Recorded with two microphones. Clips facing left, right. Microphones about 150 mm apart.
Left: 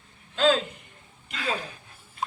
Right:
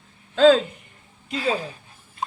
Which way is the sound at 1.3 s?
30° right (ahead or behind).